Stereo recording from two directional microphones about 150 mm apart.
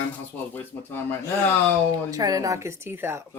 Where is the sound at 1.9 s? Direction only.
25° right (ahead or behind).